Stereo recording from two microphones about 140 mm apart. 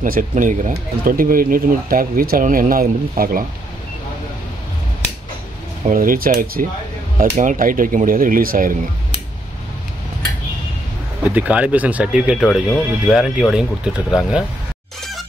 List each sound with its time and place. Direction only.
0.0 s speech: 70° right (ahead or behind); by 3.4 s 90° right
5.9 s speech: 80° right
7.2 s speech: 65° right (ahead or behind); by 8.7 s 85° right
11.3 s speech: 10° right (ahead or behind)